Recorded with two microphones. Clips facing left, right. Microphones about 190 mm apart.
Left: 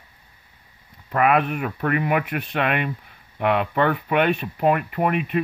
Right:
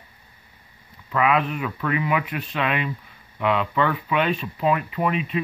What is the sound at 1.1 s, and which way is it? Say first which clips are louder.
Speech: left 2 dB; 55° left (ahead or behind).